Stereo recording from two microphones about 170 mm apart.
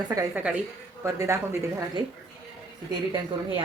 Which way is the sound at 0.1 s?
20° right (ahead or behind).